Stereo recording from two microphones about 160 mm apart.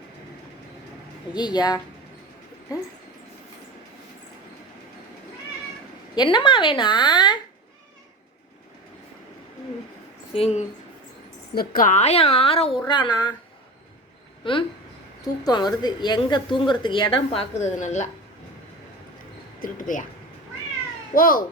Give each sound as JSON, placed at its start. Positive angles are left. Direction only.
{"t": 1.3, "sound": "speech", "side_deg": 25}
{"t": 6.1, "sound": "speech", "side_deg": 30}
{"t": 10.3, "sound": "a woman's voice", "side_deg": 40}
{"t": 11.5, "sound": "a woman's voice", "side_deg": 70}
{"t": 15.2, "sound": "a woman's voice", "side_deg": 25}
{"t": 19.5, "sound": "speech", "side_deg": 55}
{"t": 21.2, "sound": "a child's voice", "side_deg": 60}